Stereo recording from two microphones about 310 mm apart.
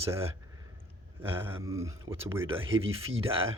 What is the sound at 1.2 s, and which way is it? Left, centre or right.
Speech, centre.